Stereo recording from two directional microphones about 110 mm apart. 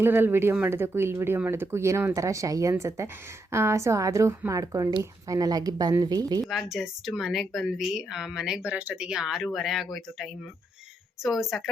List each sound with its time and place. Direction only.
0.0 s a woman's voice: 20° right (ahead or behind); by 6.4 s 35° right (ahead or behind)
6.5 s speech: centre (ahead or behind)